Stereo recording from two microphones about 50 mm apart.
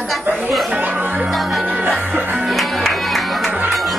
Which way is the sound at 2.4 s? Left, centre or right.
Centre.